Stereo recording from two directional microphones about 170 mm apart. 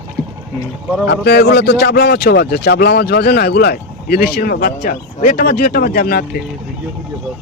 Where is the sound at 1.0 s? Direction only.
75° left (ahead or behind).